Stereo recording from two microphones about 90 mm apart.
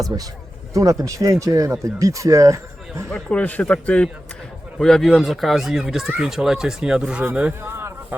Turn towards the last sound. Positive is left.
turn(degrees=-25)  # may be behind; listen again after turning